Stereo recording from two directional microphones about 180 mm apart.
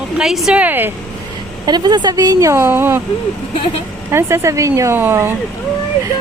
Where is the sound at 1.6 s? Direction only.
25° right (ahead or behind).